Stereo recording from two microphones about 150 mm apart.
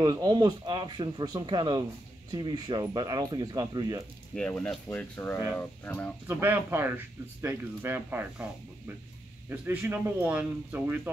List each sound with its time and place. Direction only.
0.0 s speech: 25° right (ahead or behind)
4.4 s speech: 10° left (ahead or behind)
6.2 s speech: 15° right (ahead or behind)